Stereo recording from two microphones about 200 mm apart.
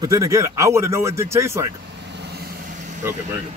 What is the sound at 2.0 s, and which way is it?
Vehicle, 55° right (ahead or behind).